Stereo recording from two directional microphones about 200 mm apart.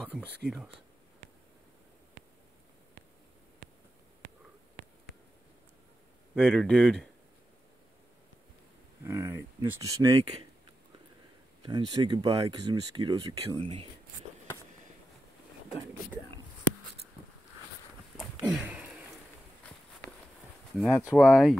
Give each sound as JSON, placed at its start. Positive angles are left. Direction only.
{"t": 0.0, "sound": "speech", "side_deg": 5}
{"t": 6.3, "sound": "speech", "side_deg": 5}
{"t": 9.0, "sound": "speech", "side_deg": -10}
{"t": 11.6, "sound": "speech", "side_deg": -20}
{"t": 18.1, "sound": "a sound", "side_deg": 0}
{"t": 20.7, "sound": "speech", "side_deg": 0}